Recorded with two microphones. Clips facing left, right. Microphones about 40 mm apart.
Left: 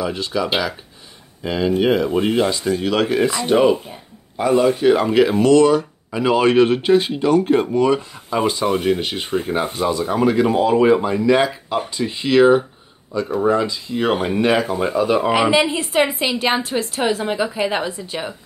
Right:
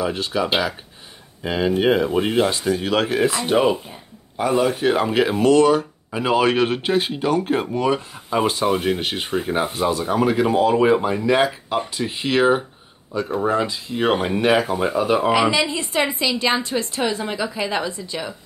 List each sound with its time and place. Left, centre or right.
0.0 s speech: centre
15.8 s a woman's voice: centre